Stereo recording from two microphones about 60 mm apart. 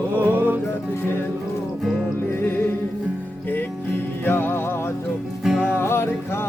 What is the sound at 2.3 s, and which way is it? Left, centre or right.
Music, left.